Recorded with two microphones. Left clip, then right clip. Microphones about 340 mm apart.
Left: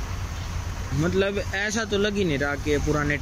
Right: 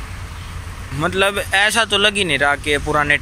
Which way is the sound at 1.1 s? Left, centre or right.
Centre.